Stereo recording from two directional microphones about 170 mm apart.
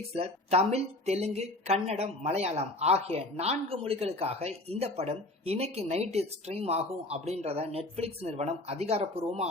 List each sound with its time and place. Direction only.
0.1 s speech: 35° right (ahead or behind)